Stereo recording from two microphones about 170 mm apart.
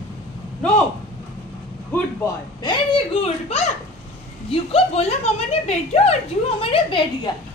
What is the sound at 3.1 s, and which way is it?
Speech, 35° left (ahead or behind).